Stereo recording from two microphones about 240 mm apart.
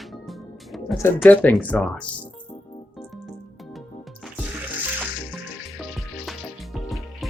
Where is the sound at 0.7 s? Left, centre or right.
Centre.